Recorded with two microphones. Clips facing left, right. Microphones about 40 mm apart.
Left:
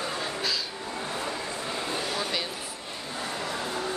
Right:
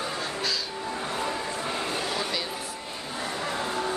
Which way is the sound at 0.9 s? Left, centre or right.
Right.